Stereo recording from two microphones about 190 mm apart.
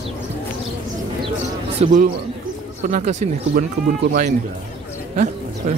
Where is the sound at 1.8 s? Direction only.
40° right (ahead or behind).